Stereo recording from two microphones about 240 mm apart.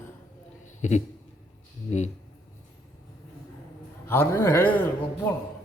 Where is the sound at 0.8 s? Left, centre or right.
Left.